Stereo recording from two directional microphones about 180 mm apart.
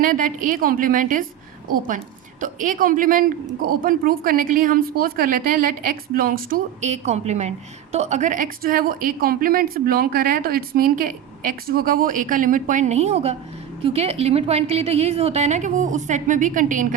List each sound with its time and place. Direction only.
0.0 s a woman's voice: 50° right (ahead or behind)
2.4 s a woman's voice: 45° right (ahead or behind)